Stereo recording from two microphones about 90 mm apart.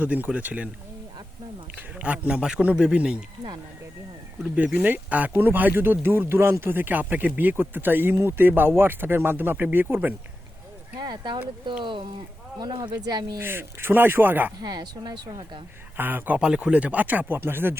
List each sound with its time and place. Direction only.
0.0 s speech: 15° right (ahead or behind)
1.7 s speech: 15° right (ahead or behind)
4.5 s speech: 15° right (ahead or behind)
10.9 s speech: 55° right (ahead or behind)
12.5 s a woman's voice: 55° right (ahead or behind)
13.4 s speech: 25° right (ahead or behind)
14.6 s a woman's voice: 50° right (ahead or behind)
16.0 s speech: 20° right (ahead or behind)